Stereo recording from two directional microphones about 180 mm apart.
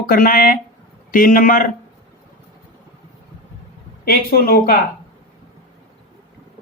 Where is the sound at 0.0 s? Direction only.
55° left (ahead or behind).